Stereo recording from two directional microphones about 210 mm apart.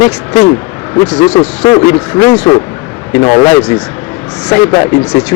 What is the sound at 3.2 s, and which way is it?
Speech, 20° left (ahead or behind).